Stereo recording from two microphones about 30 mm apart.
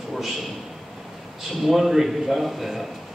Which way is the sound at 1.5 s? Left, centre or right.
Centre.